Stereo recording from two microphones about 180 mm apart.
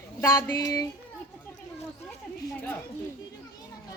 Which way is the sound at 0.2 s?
20° left (ahead or behind).